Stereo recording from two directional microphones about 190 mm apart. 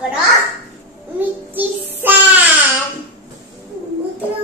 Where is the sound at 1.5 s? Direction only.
10° right (ahead or behind).